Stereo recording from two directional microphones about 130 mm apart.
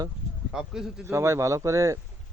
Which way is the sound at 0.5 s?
5° right (ahead or behind).